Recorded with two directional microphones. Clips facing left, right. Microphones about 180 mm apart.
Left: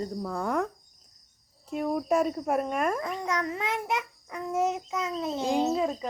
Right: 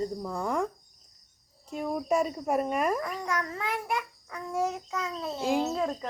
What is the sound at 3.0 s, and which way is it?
A child's voice, 20° left (ahead or behind).